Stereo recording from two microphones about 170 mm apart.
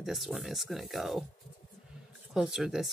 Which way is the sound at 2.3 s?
Centre (ahead or behind).